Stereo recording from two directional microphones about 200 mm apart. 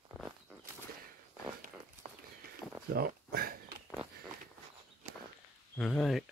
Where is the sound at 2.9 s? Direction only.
50° right (ahead or behind).